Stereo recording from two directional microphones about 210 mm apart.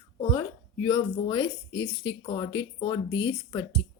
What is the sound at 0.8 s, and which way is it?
Speech, 20° left (ahead or behind).